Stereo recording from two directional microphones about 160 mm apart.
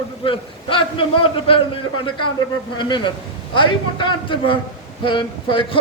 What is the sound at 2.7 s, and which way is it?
A man's voice, 30° left (ahead or behind).